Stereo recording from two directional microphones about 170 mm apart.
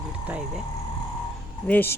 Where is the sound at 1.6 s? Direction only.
10° left (ahead or behind).